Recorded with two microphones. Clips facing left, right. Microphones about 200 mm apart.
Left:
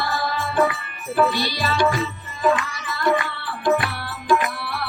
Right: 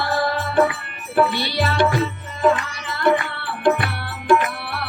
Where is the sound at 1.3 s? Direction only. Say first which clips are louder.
Right 2 dB; 60° right (ahead or behind).